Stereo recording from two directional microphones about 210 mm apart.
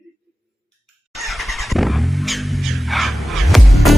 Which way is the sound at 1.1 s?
Centre (ahead or behind).